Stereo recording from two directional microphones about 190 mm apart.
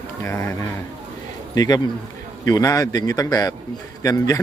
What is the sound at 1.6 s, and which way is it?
A man's voice, 20° left (ahead or behind).